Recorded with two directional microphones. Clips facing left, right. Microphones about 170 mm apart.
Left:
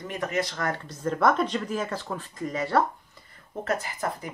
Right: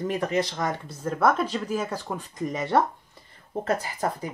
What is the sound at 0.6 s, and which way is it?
Speech, 15° right (ahead or behind).